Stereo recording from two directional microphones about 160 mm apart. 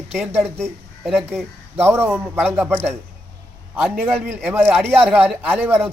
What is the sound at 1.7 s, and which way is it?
A man's voice, 15° right (ahead or behind).